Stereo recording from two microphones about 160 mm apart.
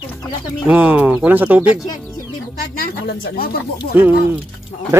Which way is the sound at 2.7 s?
70° left (ahead or behind).